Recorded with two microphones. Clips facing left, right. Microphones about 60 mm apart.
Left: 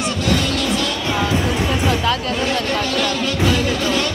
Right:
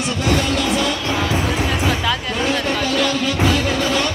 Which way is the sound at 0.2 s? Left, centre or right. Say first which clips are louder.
Right 2 dB; centre.